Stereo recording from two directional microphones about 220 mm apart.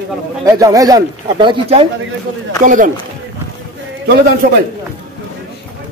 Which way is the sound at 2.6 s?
35° right (ahead or behind).